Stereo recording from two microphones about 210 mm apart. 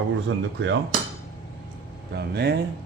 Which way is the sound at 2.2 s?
50° right (ahead or behind).